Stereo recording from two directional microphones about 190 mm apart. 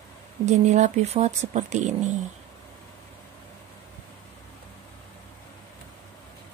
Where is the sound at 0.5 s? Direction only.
40° right (ahead or behind).